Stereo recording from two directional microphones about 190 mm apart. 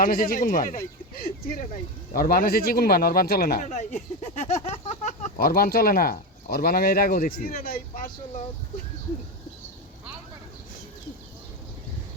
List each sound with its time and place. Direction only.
0.0 s speech: 50° left (ahead or behind)
3.7 s speech: 40° left (ahead or behind)